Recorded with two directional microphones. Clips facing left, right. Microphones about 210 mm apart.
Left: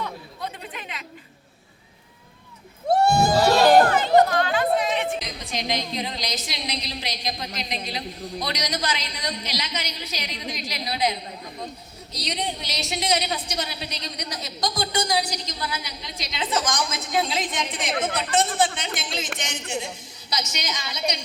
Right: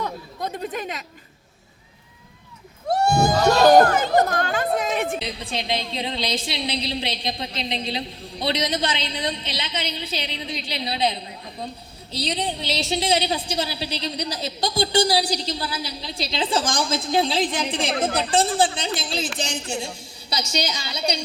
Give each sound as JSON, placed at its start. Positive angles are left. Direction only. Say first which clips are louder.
{"t": 0.0, "sound": "speech", "louder": "right 3 dB", "side_deg": -40}
{"t": 3.8, "sound": "speech", "louder": "left 1 dB", "side_deg": -45}
{"t": 5.2, "sound": "a woman's voice", "louder": "right 2 dB", "side_deg": -30}